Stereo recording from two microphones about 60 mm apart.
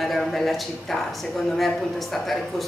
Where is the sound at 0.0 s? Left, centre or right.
Centre.